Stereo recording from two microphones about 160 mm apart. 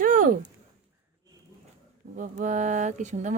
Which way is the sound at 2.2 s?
50° right (ahead or behind).